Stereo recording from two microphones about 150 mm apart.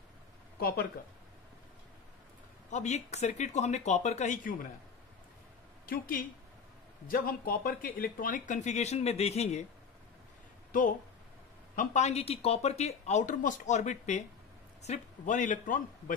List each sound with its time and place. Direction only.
0.6 s speech: 90° left
2.7 s speech: 50° left (ahead or behind)
5.9 s speech: 75° left (ahead or behind); by 9.6 s 45° left (ahead or behind)
10.7 s a man's voice: 60° left (ahead or behind)